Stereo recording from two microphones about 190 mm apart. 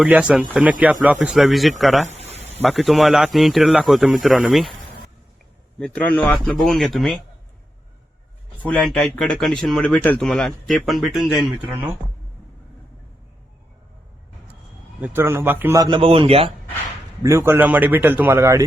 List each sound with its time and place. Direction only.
0.0 s a man's voice: 5° right (ahead or behind)
2.0 s a sound: 35° right (ahead or behind)
2.6 s speech: centre (ahead or behind)
5.8 s speech: 5° left (ahead or behind)
8.6 s speech: 5° left (ahead or behind)
15.0 s a man's voice: 10° right (ahead or behind); by 16.5 s 30° right (ahead or behind)
17.2 s a man's voice: 15° right (ahead or behind)